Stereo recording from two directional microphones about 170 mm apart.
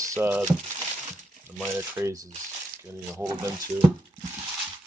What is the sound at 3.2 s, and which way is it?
Speech, 15° right (ahead or behind).